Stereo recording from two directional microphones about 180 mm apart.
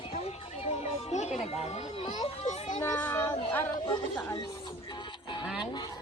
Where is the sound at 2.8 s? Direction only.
20° left (ahead or behind).